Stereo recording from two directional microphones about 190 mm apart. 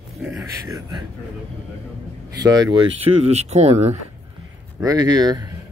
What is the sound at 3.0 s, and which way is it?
Speech, 35° right (ahead or behind).